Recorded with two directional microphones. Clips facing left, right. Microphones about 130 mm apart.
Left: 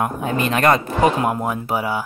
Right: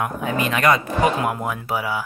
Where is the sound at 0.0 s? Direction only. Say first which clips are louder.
Left 2 dB; 35° left (ahead or behind).